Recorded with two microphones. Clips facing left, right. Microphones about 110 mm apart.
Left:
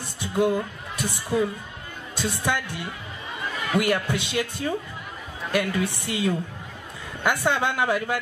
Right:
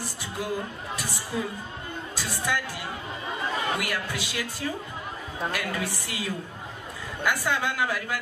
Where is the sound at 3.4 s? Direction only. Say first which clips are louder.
Right 2 dB; 30° right (ahead or behind).